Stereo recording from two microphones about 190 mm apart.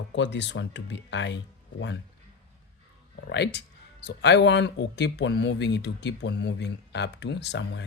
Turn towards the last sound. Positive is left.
turn(degrees=65)  # may be behind; listen again after turning